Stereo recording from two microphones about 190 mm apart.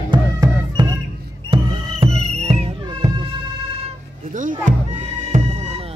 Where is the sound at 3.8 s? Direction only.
40° right (ahead or behind).